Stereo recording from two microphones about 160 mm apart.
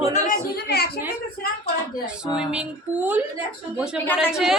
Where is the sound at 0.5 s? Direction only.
75° left (ahead or behind).